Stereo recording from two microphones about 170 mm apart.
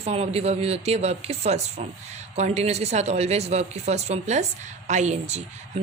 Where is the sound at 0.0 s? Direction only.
35° right (ahead or behind).